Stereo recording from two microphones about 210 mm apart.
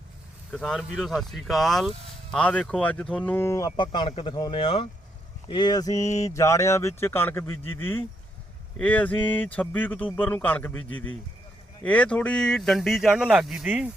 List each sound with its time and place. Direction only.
0.5 s speech: centre (ahead or behind)